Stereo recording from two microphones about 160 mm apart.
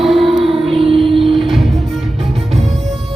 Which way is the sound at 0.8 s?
35° right (ahead or behind).